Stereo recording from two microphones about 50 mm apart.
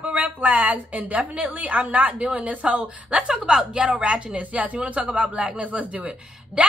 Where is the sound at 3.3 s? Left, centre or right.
Centre.